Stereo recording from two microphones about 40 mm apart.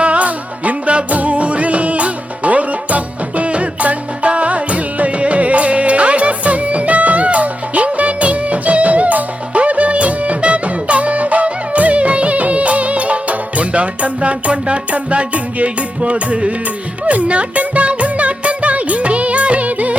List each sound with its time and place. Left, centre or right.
0.0 s music: right